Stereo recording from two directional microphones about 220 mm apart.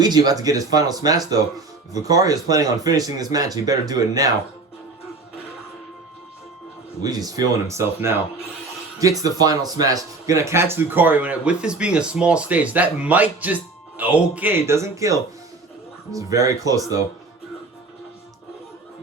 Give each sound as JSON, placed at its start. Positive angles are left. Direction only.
{"t": 0.0, "sound": "speech", "side_deg": -20}
{"t": 7.0, "sound": "speech", "side_deg": -15}